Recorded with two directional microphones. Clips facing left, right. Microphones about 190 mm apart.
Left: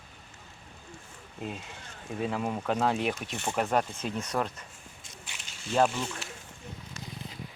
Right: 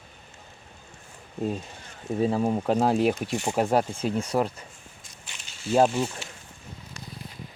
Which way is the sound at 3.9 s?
10° right (ahead or behind).